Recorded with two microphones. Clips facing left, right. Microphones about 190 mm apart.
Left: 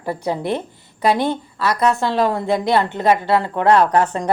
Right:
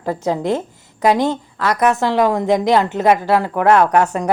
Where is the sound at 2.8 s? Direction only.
90° right.